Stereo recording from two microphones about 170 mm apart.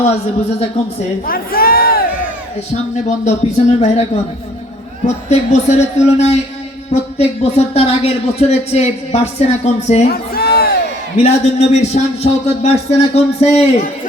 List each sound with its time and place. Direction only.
1.3 s a sound: 60° left (ahead or behind)
3.2 s speech: 40° left (ahead or behind)
10.1 s crowd: 65° left (ahead or behind)
11.2 s speech: 40° left (ahead or behind)